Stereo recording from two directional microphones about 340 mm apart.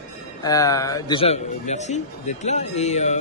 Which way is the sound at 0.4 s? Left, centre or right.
Centre.